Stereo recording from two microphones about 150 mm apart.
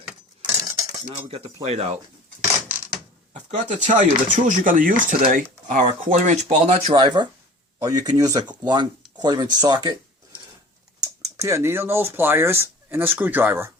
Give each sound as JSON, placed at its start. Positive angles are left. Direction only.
{"t": 0.4, "sound": "cutlery", "side_deg": 0}
{"t": 1.1, "sound": "speech", "side_deg": -40}
{"t": 3.3, "sound": "speech", "side_deg": -50}
{"t": 11.0, "sound": "speech", "side_deg": -20}